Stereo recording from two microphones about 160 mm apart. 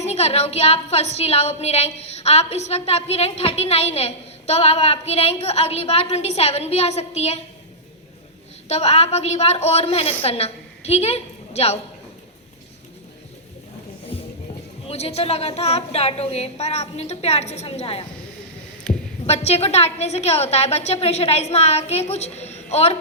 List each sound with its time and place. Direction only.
0.0 s a woman's voice: 40° left (ahead or behind)
8.7 s a woman's voice: 40° left (ahead or behind)
14.1 s music: 35° left (ahead or behind)
14.8 s a woman's voice: 40° left (ahead or behind)
18.9 s heart sounds: 5° left (ahead or behind)
19.2 s a woman's voice: 40° left (ahead or behind)